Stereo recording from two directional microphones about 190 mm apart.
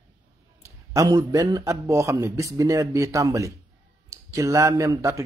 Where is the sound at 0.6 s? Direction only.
20° right (ahead or behind).